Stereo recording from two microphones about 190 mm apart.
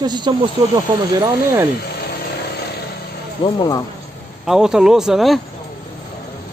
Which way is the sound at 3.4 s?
20° left (ahead or behind).